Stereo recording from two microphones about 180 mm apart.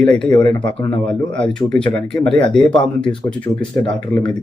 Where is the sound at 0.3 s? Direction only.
25° left (ahead or behind).